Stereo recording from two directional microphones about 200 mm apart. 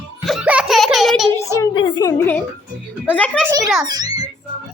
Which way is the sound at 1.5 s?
25° left (ahead or behind).